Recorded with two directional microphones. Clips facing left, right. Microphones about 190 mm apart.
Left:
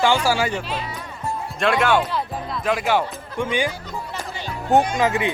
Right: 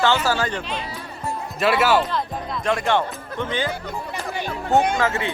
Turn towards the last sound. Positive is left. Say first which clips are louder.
# left 2 dB
turn(degrees=15)  # may be behind; listen again after turning